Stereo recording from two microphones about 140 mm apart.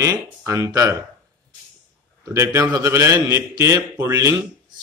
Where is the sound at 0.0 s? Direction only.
25° right (ahead or behind).